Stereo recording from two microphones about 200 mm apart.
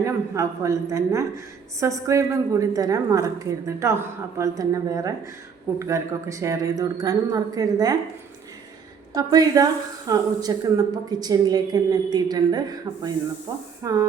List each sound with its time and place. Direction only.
0.0 s speech: 15° right (ahead or behind)
9.1 s a woman's voice: 20° right (ahead or behind)